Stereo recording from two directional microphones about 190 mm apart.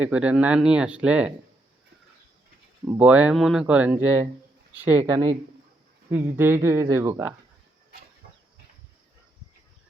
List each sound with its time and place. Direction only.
0.0 s speech: 5° right (ahead or behind)
2.8 s speech: 10° right (ahead or behind)